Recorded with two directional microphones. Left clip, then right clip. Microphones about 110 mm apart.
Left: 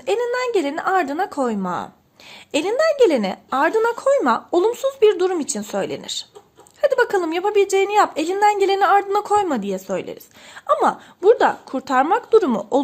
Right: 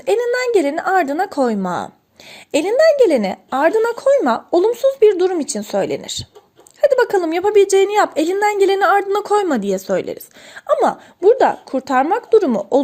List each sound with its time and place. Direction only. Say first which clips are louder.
0.0 s a woman's voice: right 4 dB; 35° right (ahead or behind)
10.7 s speech: right 2 dB; 25° right (ahead or behind)